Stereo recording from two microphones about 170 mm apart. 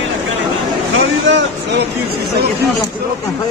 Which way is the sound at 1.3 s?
90° right.